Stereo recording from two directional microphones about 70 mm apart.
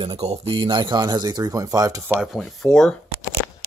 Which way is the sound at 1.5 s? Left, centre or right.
Right.